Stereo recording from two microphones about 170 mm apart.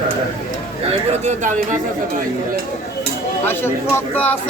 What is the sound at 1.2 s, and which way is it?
Speech, 45° right (ahead or behind).